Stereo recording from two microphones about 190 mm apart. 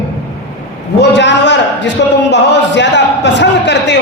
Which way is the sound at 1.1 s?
65° left (ahead or behind).